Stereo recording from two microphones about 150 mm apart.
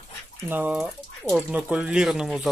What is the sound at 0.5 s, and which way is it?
Speech, 10° right (ahead or behind).